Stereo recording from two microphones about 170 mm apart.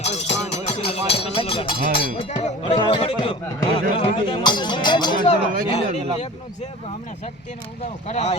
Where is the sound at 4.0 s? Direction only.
30° left (ahead or behind).